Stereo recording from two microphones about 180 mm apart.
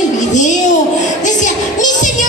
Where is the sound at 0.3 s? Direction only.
40° left (ahead or behind).